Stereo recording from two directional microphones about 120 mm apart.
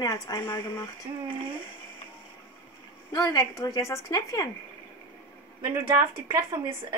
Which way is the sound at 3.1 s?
30° left (ahead or behind).